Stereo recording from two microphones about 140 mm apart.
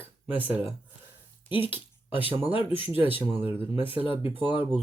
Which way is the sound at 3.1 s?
15° right (ahead or behind).